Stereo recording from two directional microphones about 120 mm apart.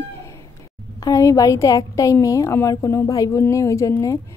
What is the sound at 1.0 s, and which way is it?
A woman's voice, 25° left (ahead or behind).